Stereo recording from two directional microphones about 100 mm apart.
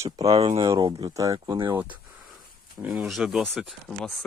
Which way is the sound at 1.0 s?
35° right (ahead or behind).